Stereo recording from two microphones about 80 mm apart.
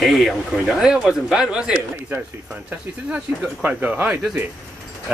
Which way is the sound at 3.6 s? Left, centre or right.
Centre.